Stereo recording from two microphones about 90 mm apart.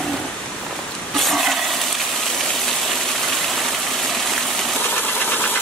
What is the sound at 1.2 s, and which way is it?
Toilet flush, centre (ahead or behind).